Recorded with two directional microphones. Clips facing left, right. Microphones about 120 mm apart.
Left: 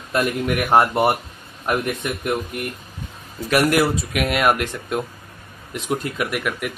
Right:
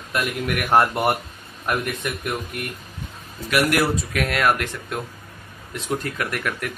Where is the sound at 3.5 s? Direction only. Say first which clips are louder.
Left 3 dB; 40° left (ahead or behind).